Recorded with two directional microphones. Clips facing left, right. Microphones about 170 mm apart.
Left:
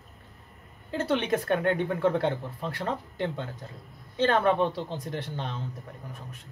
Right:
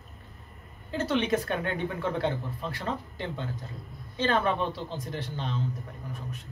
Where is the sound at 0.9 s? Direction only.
55° left (ahead or behind).